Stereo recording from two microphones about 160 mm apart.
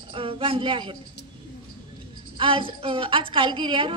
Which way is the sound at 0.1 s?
35° right (ahead or behind).